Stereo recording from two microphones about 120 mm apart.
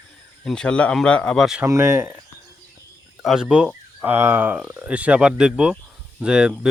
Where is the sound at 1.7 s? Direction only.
20° right (ahead or behind).